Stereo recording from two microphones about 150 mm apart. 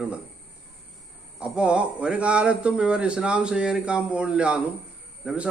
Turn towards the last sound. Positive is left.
turn(degrees=-5)  # may be behind; listen again after turning